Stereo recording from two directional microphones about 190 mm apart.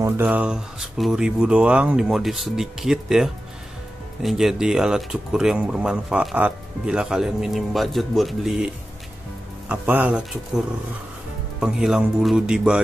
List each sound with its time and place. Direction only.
0.0 s speech: 5° right (ahead or behind)
11.6 s speech: 5° right (ahead or behind)